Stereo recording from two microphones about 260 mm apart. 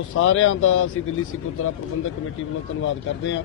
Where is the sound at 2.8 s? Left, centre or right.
Left.